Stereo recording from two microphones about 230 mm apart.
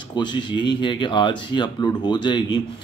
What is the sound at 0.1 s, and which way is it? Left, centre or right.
A man's voice, centre.